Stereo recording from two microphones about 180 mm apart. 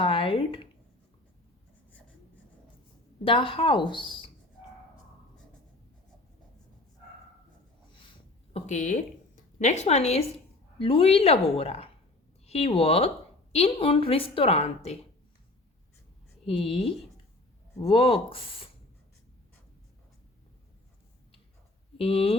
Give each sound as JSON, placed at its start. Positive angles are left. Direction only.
{"t": 0.0, "sound": "speech", "side_deg": 30}
{"t": 3.2, "sound": "speech", "side_deg": 30}
{"t": 8.5, "sound": "a woman's voice", "side_deg": 40}
{"t": 16.5, "sound": "a woman's voice", "side_deg": 30}
{"t": 21.9, "sound": "speech", "side_deg": 30}